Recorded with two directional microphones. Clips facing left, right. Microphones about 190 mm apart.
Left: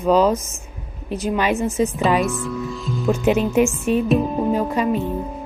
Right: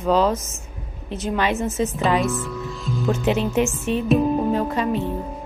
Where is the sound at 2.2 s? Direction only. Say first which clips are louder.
Left 2 dB; centre (ahead or behind).